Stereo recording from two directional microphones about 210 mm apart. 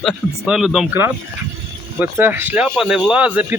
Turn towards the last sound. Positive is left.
turn(degrees=-5)  # may be behind; listen again after turning